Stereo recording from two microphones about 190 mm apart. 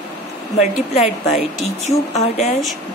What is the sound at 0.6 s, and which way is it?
A woman's voice, 35° left (ahead or behind).